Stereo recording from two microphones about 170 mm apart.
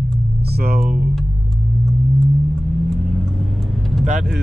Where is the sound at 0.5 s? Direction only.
65° right (ahead or behind).